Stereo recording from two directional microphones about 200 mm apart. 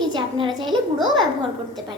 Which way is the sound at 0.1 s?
25° right (ahead or behind).